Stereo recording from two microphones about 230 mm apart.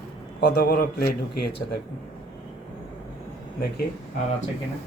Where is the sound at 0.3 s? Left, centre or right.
Left.